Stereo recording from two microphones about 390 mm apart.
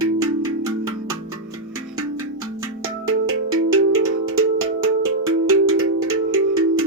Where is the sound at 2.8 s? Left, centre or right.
Right.